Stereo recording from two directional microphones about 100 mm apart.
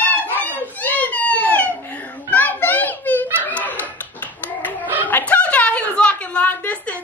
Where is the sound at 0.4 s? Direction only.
15° left (ahead or behind).